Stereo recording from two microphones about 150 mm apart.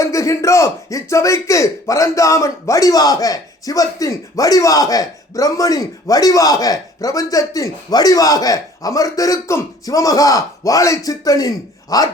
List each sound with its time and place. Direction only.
0.0 s speech: 20° left (ahead or behind)